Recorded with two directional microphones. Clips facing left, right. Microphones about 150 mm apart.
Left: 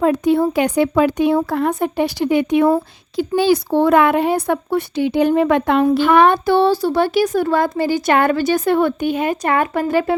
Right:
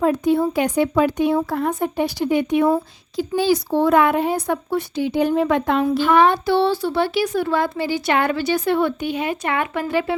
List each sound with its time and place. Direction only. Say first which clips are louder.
0.0 s speech: left 3 dB; 80° left
3.2 s a child's voice: left 3 dB; 70° left (ahead or behind); by 10.2 s 45° left (ahead or behind)